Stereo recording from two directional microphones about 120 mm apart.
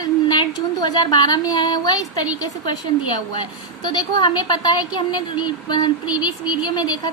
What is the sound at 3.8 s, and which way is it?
A woman's voice, 40° left (ahead or behind).